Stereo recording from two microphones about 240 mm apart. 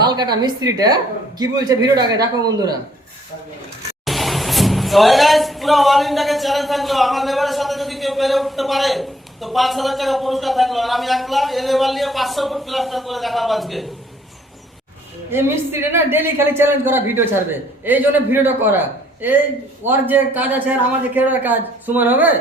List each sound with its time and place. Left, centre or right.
0.0 s a man's voice: centre
4.0 s speech: centre
15.3 s a man's voice: centre
19.9 s a man's voice: centre